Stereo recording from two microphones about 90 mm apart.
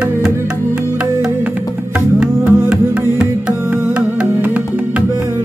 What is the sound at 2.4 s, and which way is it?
Music, 10° right (ahead or behind).